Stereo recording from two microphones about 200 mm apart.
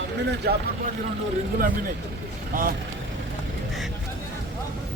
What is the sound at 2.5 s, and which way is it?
Speech, 45° right (ahead or behind).